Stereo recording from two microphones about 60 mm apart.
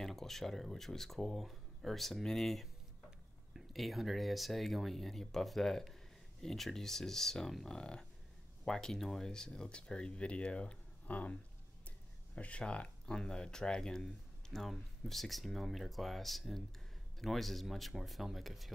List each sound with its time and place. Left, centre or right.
0.0 s speech: centre; by 11.3 s left
12.4 s speech: centre